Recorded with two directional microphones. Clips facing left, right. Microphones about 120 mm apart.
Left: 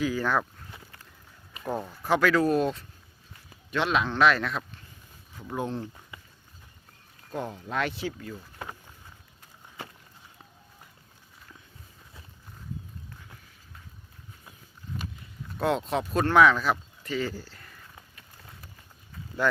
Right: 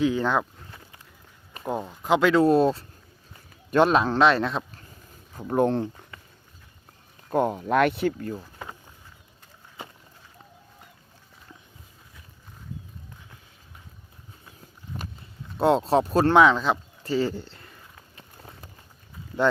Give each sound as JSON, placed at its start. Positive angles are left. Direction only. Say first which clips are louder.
{"t": 0.0, "sound": "speech", "louder": "right 4 dB", "side_deg": -25}
{"t": 1.6, "sound": "speech", "louder": "right 3 dB", "side_deg": -15}
{"t": 3.7, "sound": "speech", "louder": "right 7 dB", "side_deg": -45}
{"t": 5.3, "sound": "speech", "louder": "right 10 dB", "side_deg": -45}
{"t": 7.3, "sound": "speech", "louder": "right 11 dB", "side_deg": -55}
{"t": 15.5, "sound": "speech", "louder": "right 7 dB", "side_deg": -30}
{"t": 18.2, "sound": "run", "louder": "right 4 dB", "side_deg": -30}